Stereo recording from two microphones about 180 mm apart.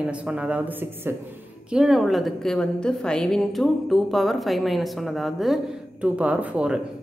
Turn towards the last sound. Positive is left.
turn(degrees=-5)  # may be behind; listen again after turning